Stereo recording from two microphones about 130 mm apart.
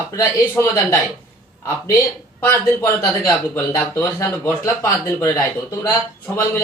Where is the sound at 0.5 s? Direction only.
25° left (ahead or behind).